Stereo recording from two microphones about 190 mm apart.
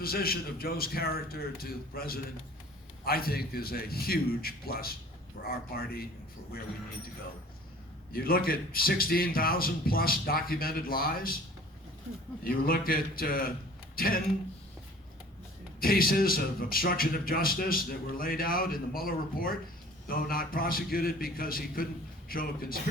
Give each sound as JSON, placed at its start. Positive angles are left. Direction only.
{"t": 0.0, "sound": "speech", "side_deg": 50}
{"t": 8.1, "sound": "speech", "side_deg": 50}
{"t": 12.5, "sound": "speech", "side_deg": 50}
{"t": 15.8, "sound": "speech", "side_deg": 50}